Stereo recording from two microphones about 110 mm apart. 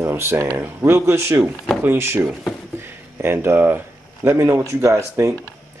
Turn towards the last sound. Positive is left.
turn(degrees=-25)  # may be behind; listen again after turning